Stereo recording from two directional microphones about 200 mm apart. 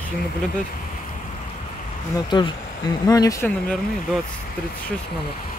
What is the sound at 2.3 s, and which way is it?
Speech, 20° left (ahead or behind).